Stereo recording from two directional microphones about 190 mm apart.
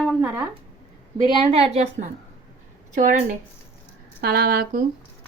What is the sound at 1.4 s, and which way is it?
A woman's voice, 30° right (ahead or behind).